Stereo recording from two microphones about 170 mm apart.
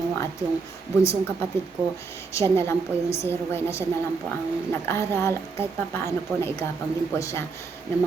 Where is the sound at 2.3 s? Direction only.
15° left (ahead or behind).